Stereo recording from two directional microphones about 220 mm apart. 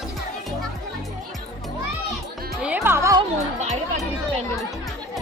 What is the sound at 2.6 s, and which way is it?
Music, 10° right (ahead or behind).